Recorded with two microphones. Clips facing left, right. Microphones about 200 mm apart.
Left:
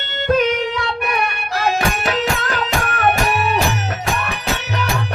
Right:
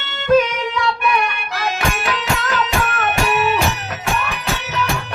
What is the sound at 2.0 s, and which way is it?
Music, 40° left (ahead or behind).